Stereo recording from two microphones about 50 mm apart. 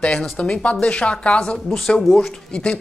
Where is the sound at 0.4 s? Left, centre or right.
Left.